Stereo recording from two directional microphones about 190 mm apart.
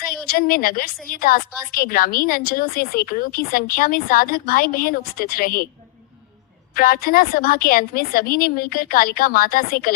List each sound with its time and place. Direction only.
0.1 s a woman's voice: 50° left (ahead or behind)
6.7 s a woman's voice: 50° left (ahead or behind)